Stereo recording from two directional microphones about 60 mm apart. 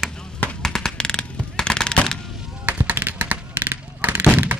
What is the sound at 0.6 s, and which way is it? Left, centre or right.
Machine gun, centre.